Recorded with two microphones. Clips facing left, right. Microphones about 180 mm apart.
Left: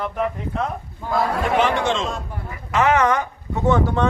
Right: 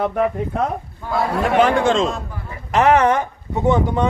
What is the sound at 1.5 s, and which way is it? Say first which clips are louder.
Speech: right 5 dB; 55° right (ahead or behind).